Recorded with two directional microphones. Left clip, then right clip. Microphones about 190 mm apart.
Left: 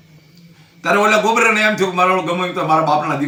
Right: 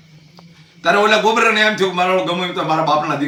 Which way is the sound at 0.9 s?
20° left (ahead or behind).